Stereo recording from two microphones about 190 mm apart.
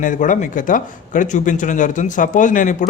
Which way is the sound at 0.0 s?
40° left (ahead or behind).